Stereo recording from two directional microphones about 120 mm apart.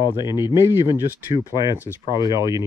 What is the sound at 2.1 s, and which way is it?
Speech, 35° left (ahead or behind).